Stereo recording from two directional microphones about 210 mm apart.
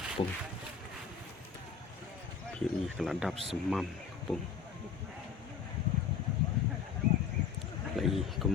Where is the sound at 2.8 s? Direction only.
Centre (ahead or behind).